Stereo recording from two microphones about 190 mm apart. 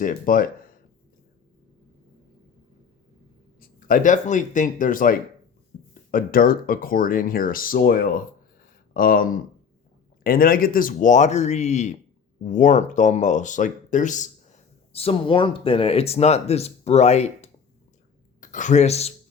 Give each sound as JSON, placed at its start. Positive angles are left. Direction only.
{"t": 0.0, "sound": "speech", "side_deg": 45}
{"t": 3.6, "sound": "speech", "side_deg": 45}
{"t": 14.9, "sound": "speech", "side_deg": 30}